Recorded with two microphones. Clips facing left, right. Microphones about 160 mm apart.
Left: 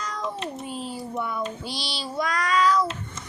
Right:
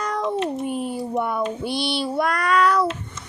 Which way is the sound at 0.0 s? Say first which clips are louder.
Right 7 dB; 60° right (ahead or behind).